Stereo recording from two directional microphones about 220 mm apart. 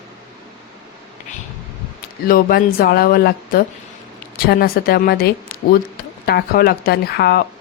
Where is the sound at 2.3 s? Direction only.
40° left (ahead or behind).